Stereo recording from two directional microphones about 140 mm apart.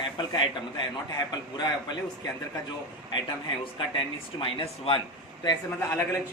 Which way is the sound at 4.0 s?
40° left (ahead or behind).